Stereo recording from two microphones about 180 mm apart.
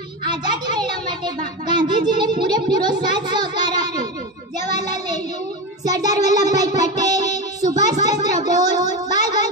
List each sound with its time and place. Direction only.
0.3 s a child's voice: 25° right (ahead or behind)
4.6 s child singing: 20° right (ahead or behind)
5.9 s music: 20° right (ahead or behind)
8.0 s a sound: 20° right (ahead or behind)